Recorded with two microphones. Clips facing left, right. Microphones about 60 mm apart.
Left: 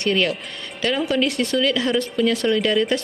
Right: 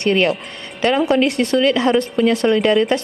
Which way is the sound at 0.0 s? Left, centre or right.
Right.